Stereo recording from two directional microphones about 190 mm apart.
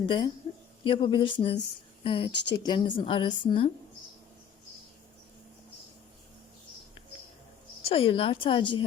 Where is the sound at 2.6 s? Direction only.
25° left (ahead or behind).